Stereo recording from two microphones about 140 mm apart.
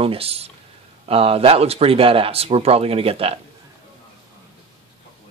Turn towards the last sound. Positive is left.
turn(degrees=-45)  # may be behind; listen again after turning